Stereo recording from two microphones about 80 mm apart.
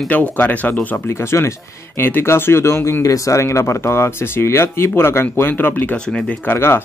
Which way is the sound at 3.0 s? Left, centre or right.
Left.